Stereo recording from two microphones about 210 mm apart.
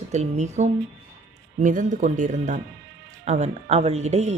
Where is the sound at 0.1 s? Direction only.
35° right (ahead or behind).